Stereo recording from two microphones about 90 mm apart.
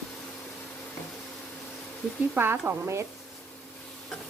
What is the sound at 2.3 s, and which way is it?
Speech, 25° right (ahead or behind).